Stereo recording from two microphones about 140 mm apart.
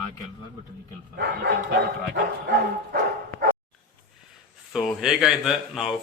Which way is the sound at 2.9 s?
85° right.